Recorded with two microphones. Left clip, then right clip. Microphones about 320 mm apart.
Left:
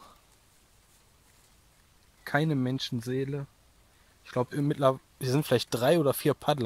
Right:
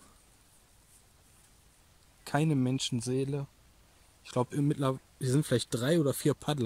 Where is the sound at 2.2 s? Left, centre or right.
Centre.